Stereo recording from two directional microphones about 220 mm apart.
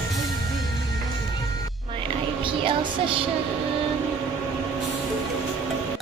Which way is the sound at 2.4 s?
25° right (ahead or behind).